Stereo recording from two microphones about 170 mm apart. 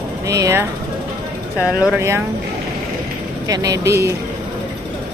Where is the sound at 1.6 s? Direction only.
5° right (ahead or behind).